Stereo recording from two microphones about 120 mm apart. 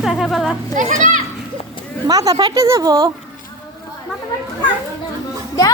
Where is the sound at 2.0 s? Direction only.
30° right (ahead or behind).